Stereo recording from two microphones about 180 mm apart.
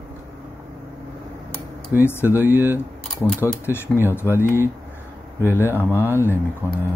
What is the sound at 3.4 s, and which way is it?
Speech, 15° left (ahead or behind).